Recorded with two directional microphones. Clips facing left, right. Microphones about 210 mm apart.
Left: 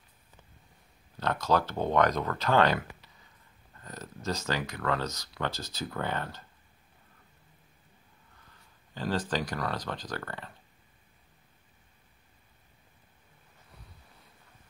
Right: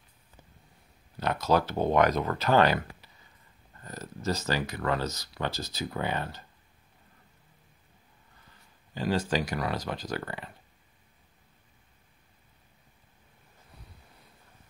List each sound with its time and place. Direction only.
1.2 s speech: 10° right (ahead or behind)
3.8 s speech: 5° right (ahead or behind)
8.9 s speech: 10° right (ahead or behind)